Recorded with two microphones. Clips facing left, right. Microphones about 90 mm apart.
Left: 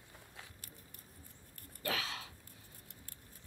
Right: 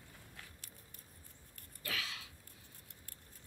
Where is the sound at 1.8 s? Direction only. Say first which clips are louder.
Left 5 dB; 35° left (ahead or behind).